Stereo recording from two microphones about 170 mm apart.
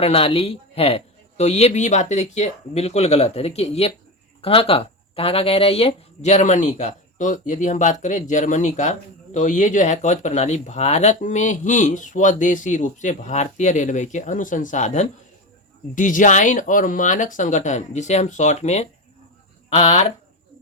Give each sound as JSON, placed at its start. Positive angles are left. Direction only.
{"t": 0.0, "sound": "speech", "side_deg": 35}